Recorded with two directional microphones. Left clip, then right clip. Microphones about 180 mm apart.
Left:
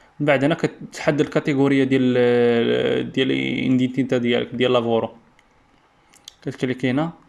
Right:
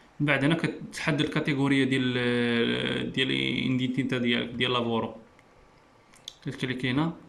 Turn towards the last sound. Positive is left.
turn(degrees=20)  # may be behind; listen again after turning